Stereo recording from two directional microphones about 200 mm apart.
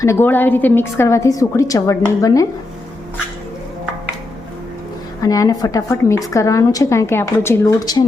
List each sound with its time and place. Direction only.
0.0 s a woman's voice: 15° left (ahead or behind)
5.2 s a woman's voice: 15° left (ahead or behind)